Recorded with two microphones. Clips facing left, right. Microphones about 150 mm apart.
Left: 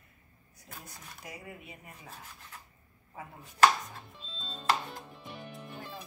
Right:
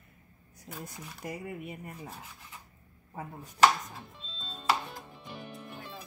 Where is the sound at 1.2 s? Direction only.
55° right (ahead or behind).